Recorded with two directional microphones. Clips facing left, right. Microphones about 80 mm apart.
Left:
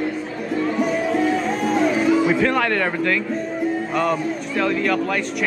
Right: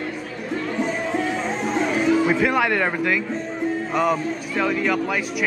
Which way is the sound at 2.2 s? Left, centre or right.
Centre.